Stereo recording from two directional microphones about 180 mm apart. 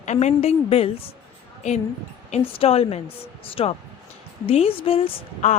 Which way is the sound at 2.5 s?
35° left (ahead or behind).